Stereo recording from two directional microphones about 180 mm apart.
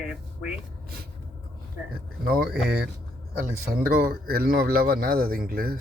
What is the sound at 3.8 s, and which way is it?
Speech, 55° right (ahead or behind).